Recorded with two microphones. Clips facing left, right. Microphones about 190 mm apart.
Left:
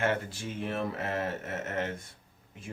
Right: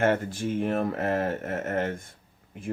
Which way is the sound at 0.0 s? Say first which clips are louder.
Right 6 dB; 50° right (ahead or behind).